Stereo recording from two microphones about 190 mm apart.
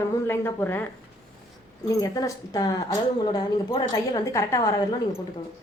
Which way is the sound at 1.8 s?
20° left (ahead or behind).